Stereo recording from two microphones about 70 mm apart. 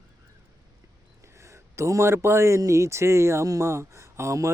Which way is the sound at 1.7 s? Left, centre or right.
Right.